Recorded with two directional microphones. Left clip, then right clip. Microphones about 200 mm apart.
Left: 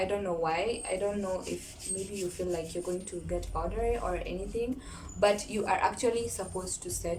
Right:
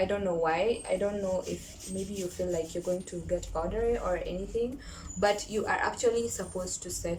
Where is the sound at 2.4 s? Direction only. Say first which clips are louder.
Right 2 dB; 10° left (ahead or behind).